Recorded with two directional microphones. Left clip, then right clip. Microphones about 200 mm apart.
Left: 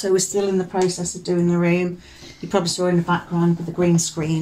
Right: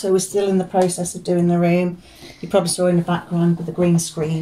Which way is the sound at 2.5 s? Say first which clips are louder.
Right 3 dB; 30° left (ahead or behind).